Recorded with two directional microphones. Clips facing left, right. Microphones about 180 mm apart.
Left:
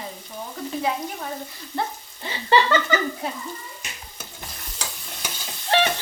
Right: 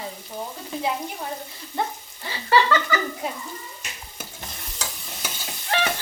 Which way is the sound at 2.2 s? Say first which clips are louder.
Left 1 dB; 20° left (ahead or behind).